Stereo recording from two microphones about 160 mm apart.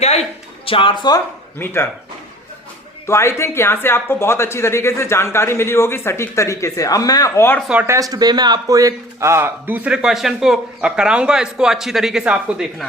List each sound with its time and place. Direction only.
0.0 s a sound: 40° left (ahead or behind)
1.5 s speech: 15° left (ahead or behind)
3.1 s speech: 15° left (ahead or behind)
7.7 s speech: 10° right (ahead or behind)
7.9 s a man's voice: 20° right (ahead or behind); by 12.9 s 5° right (ahead or behind)